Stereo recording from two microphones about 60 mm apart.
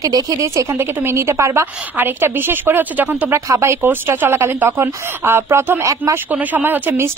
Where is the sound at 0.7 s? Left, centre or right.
Right.